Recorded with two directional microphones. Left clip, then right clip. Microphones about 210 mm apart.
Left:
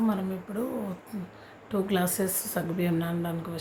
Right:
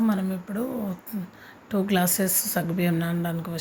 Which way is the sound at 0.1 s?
10° right (ahead or behind).